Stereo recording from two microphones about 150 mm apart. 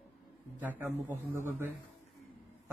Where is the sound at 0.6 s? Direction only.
15° right (ahead or behind).